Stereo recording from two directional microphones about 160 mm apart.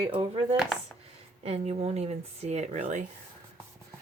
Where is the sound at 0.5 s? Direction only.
5° right (ahead or behind).